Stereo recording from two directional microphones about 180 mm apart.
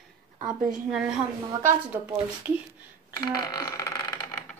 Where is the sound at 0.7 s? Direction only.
5° right (ahead or behind).